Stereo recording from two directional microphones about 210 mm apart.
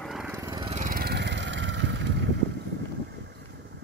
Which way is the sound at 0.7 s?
40° right (ahead or behind).